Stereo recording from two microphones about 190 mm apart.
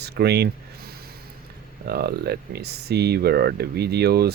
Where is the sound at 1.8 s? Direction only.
60° right (ahead or behind).